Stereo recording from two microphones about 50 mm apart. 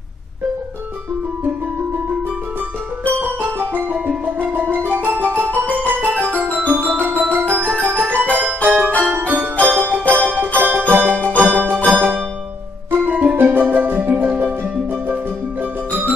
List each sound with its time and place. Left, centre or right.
3.3 s music: right
6.5 s marimba: right
8.2 s music: right
9.7 s music: right
10.9 s music: right
14.2 s music: right
14.6 s music: right